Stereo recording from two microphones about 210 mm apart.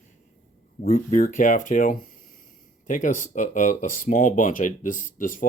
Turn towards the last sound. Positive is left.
turn(degrees=40)  # may be behind; listen again after turning